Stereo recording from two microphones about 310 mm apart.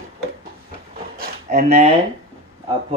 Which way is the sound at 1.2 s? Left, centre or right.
Right.